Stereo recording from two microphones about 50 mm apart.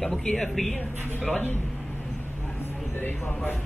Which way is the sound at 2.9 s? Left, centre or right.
Left.